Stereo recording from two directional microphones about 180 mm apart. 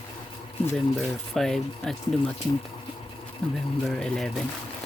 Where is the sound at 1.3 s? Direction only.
Centre (ahead or behind).